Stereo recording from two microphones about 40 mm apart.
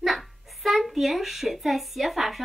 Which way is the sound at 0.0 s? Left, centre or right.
Centre.